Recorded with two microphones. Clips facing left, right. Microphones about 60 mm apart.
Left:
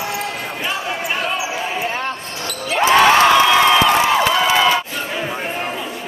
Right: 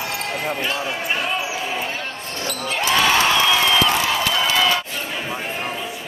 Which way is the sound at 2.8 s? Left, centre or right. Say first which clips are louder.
Left 7 dB; left.